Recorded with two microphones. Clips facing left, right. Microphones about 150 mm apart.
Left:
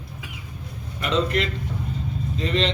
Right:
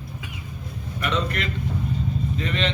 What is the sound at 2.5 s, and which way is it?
Speech, 30° left (ahead or behind).